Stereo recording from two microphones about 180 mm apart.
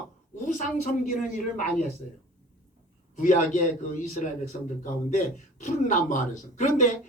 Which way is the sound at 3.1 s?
45° left (ahead or behind).